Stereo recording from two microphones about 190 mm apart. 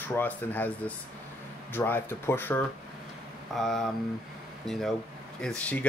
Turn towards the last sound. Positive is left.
turn(degrees=5)  # may be behind; listen again after turning